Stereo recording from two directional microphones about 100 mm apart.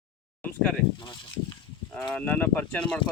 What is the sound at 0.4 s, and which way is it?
Speech, 10° left (ahead or behind).